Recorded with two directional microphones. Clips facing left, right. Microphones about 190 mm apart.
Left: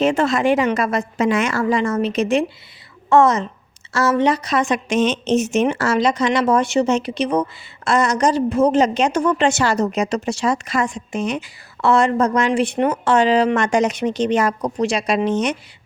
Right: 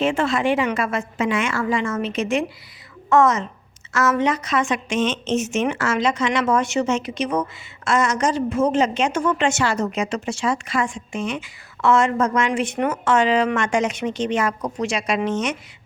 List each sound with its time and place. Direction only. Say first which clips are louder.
0.0 s a woman's voice: left 3 dB; 40° left (ahead or behind)